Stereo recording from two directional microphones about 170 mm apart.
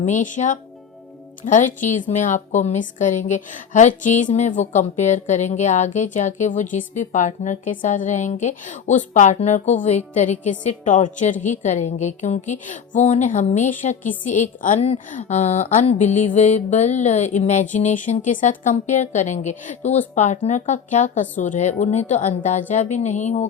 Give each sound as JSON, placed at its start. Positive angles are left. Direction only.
{"t": 0.0, "sound": "a woman's voice", "side_deg": 50}